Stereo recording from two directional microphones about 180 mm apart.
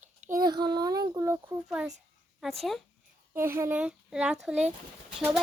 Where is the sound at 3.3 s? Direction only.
15° right (ahead or behind).